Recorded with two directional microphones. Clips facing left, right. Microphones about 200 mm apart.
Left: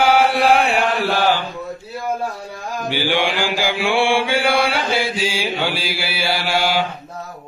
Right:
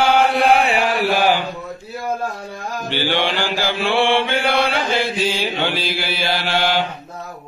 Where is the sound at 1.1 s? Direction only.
15° right (ahead or behind).